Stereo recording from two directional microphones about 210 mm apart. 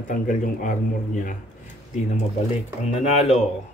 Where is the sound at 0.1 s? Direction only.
40° left (ahead or behind).